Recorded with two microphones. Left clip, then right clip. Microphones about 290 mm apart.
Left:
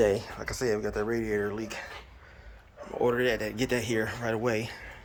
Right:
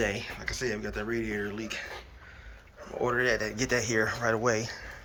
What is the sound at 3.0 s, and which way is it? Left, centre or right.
Speech, centre.